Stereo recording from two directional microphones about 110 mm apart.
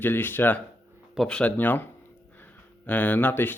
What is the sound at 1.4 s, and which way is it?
Speech, 15° left (ahead or behind).